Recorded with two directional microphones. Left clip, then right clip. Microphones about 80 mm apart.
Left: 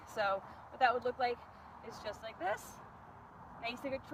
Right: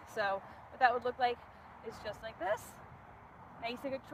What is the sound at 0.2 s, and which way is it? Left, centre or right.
Speech, right.